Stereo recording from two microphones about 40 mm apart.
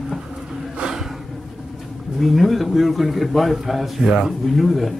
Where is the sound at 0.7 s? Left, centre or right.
Centre.